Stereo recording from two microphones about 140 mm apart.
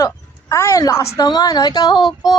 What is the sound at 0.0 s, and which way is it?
Speech, 20° left (ahead or behind).